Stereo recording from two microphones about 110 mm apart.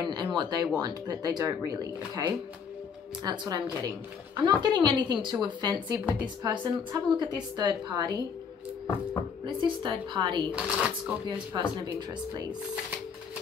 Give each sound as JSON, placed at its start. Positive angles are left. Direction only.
{"t": 0.0, "sound": "a sound", "side_deg": -40}
{"t": 0.7, "sound": "a woman's voice", "side_deg": -35}
{"t": 9.6, "sound": "speech", "side_deg": -45}
{"t": 10.5, "sound": "speech", "side_deg": -10}
{"t": 11.2, "sound": "speech", "side_deg": -45}